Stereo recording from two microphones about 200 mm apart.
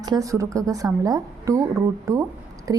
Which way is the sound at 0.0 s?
20° right (ahead or behind).